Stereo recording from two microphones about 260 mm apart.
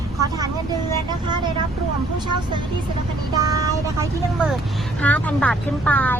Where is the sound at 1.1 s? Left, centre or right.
Centre.